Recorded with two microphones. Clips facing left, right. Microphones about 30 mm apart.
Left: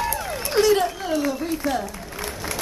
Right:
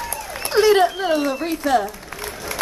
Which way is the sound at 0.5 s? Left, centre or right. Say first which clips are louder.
Right 4 dB; right.